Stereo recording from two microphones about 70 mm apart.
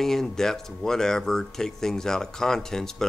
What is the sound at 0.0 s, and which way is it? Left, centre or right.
Speech, centre.